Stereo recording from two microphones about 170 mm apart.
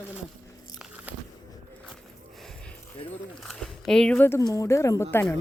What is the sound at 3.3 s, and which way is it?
Speech, centre (ahead or behind).